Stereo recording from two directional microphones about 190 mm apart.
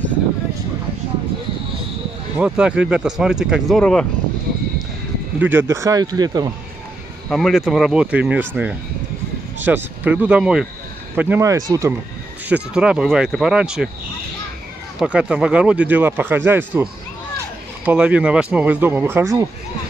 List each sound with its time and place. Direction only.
2.3 s speech: 5° right (ahead or behind)
5.4 s speech: 10° right (ahead or behind)
7.2 s speech: centre (ahead or behind); by 12.0 s 15° right (ahead or behind)
12.4 s speech: 5° right (ahead or behind)
15.0 s speech: 5° right (ahead or behind)